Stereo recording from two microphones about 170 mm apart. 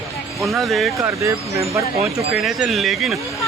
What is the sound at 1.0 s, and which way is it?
Speech, 15° right (ahead or behind).